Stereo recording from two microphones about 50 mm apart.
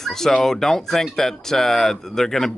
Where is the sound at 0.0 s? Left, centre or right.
Centre.